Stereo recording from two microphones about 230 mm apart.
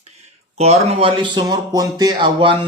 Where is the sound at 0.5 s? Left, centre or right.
Right.